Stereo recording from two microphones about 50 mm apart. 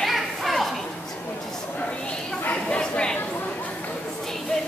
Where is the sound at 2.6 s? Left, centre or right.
Left.